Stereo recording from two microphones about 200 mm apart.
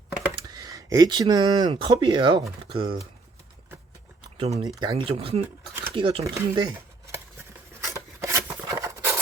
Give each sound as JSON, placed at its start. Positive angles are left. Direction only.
{"t": 0.4, "sound": "speech", "side_deg": -20}
{"t": 4.4, "sound": "speech", "side_deg": -30}
{"t": 4.7, "sound": "speech", "side_deg": -20}
{"t": 6.2, "sound": "speech", "side_deg": -15}
{"t": 7.8, "sound": "rub", "side_deg": -15}